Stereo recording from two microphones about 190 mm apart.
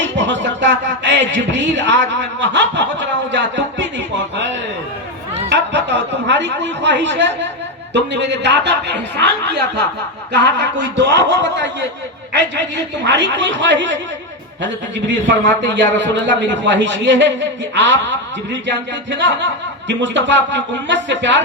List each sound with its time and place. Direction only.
0.0 s music: 70° right (ahead or behind)
0.4 s a man's voice: 70° right (ahead or behind)
5.5 s a man's voice: 65° right (ahead or behind)
18.5 s a man's voice: 70° right (ahead or behind)